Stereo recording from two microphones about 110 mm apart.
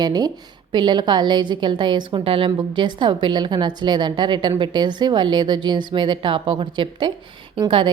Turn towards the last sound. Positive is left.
turn(degrees=-50)  # may be behind; listen again after turning